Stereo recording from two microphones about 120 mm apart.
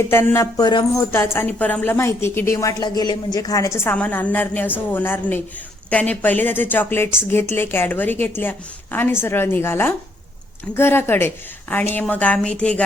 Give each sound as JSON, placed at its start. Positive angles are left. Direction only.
{"t": 0.1, "sound": "a woman's voice", "side_deg": 20}